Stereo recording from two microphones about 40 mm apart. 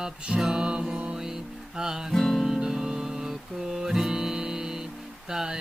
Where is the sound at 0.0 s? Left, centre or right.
Centre.